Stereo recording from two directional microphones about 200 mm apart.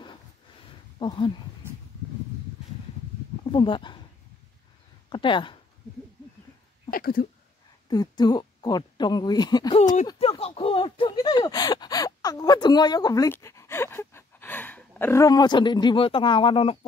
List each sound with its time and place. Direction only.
0.9 s speech: 25° left (ahead or behind)
3.5 s speech: 25° left (ahead or behind)
5.1 s speech: 25° left (ahead or behind)
6.9 s speech: 50° left (ahead or behind)
7.9 s a woman's voice: 20° left (ahead or behind)